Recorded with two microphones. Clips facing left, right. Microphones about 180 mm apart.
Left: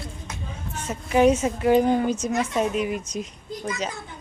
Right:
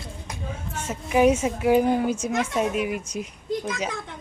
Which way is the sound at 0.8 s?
5° right (ahead or behind).